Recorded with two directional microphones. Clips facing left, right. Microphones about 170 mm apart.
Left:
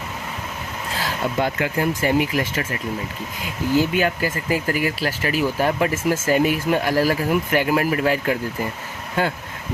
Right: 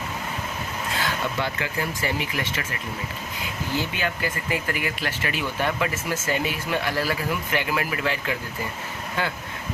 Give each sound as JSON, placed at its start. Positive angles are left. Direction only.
{"t": 0.9, "sound": "speech", "side_deg": 35}
{"t": 3.9, "sound": "speech", "side_deg": 40}